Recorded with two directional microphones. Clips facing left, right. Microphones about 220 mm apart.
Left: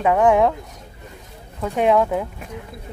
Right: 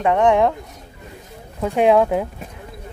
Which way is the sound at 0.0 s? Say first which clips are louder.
Even; 5° left (ahead or behind).